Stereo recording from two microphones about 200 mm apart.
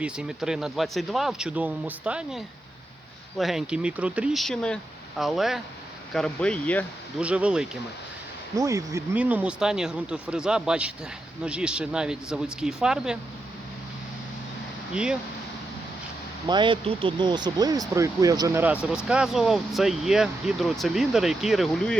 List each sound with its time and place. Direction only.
0.0 s speech: 5° right (ahead or behind)
7.2 s speech: 5° right (ahead or behind)
8.5 s speech: 15° right (ahead or behind)
14.9 s speech: 5° right (ahead or behind)
16.5 s speech: 25° right (ahead or behind); by 21.9 s centre (ahead or behind)